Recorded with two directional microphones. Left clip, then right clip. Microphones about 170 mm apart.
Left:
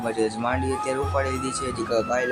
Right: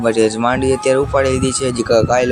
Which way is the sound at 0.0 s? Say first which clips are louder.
Right 11 dB; 40° right (ahead or behind).